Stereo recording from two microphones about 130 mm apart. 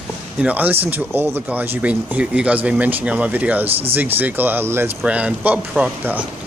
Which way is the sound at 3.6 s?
50° right (ahead or behind).